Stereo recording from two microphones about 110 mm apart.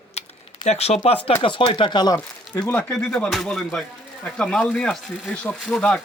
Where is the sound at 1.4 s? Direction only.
50° left (ahead or behind).